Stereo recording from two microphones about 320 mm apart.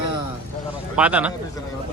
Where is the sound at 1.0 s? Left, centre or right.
Centre.